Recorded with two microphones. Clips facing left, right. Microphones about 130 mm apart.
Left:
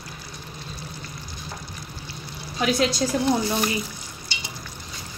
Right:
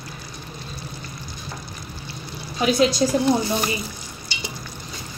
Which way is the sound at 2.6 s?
10° right (ahead or behind).